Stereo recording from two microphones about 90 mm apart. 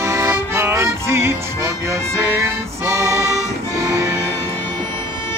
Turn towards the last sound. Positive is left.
turn(degrees=-35)  # may be behind; listen again after turning